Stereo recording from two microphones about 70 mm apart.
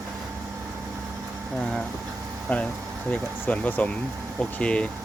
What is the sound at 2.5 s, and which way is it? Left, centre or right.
Speech, centre.